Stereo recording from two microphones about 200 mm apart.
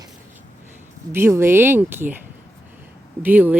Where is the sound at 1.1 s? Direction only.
10° right (ahead or behind).